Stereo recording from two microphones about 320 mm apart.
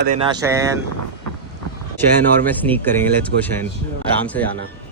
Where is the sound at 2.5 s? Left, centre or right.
Centre.